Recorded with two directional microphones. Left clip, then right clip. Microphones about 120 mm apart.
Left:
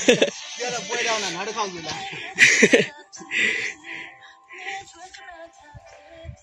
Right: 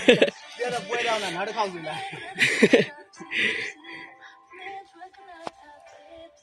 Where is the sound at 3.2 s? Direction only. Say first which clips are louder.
Left 3 dB; centre (ahead or behind).